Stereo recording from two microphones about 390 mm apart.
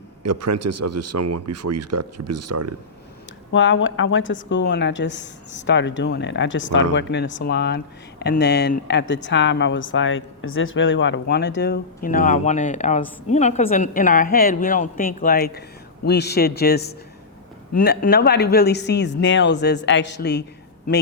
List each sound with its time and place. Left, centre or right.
0.2 s speech: right
3.5 s speech: left